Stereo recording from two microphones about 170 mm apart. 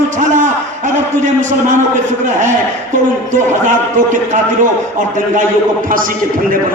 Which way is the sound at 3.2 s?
45° right (ahead or behind).